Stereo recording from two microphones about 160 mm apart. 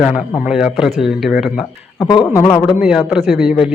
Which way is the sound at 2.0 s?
25° left (ahead or behind).